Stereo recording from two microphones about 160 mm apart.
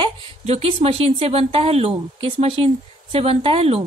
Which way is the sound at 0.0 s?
40° right (ahead or behind).